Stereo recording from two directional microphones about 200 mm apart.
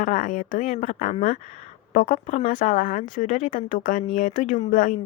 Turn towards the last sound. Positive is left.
turn(degrees=40)  # may be behind; listen again after turning